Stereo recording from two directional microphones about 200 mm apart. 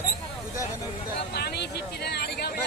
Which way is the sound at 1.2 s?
55° left (ahead or behind).